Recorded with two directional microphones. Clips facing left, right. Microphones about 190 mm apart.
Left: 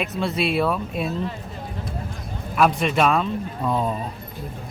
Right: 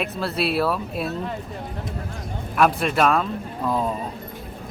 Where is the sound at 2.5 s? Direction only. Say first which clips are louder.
Even; centre (ahead or behind).